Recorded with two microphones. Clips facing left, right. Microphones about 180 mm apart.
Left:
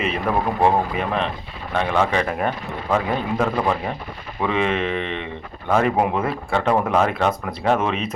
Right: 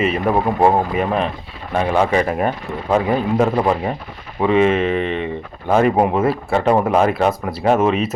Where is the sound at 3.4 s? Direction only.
20° right (ahead or behind).